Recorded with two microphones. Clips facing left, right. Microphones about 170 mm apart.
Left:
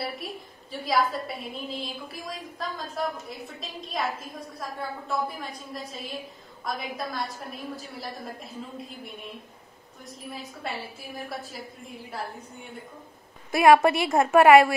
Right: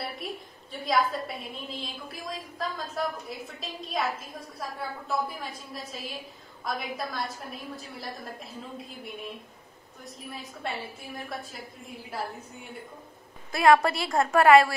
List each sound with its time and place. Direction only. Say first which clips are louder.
0.0 s a woman's voice: left 2 dB; centre (ahead or behind)
13.6 s a woman's voice: left 3 dB; 20° left (ahead or behind)